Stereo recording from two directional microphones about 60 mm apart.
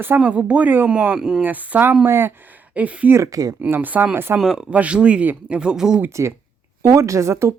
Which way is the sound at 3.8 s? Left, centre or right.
Right.